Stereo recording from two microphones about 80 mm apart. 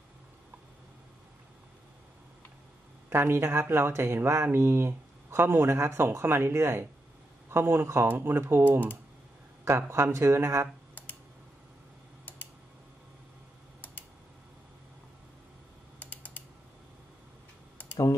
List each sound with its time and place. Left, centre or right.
3.1 s speech: right
16.0 s typing: left